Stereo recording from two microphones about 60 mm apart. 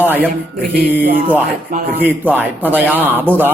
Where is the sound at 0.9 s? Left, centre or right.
Right.